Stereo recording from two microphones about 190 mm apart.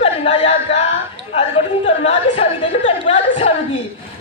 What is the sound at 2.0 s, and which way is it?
Speech, 35° left (ahead or behind).